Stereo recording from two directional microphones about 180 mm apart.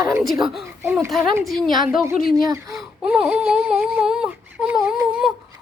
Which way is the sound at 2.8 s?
5° right (ahead or behind).